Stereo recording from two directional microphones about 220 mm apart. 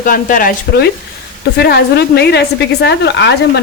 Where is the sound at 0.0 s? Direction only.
35° left (ahead or behind).